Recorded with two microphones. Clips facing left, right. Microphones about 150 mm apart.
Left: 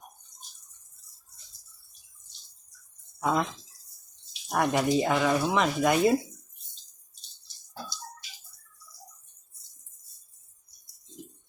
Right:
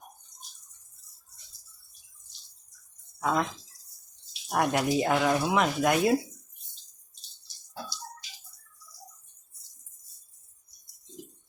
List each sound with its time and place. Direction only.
3.2 s speech: centre (ahead or behind)